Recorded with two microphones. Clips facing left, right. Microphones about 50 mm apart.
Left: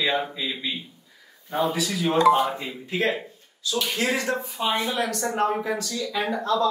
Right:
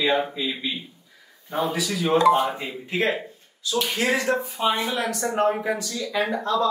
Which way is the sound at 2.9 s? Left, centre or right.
Right.